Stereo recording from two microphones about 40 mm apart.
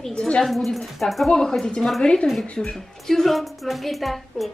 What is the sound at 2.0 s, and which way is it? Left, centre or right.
Speech, left.